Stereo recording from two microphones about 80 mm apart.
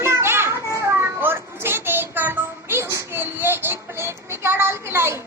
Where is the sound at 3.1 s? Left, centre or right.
Right.